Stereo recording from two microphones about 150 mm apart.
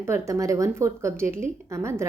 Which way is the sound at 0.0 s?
20° right (ahead or behind).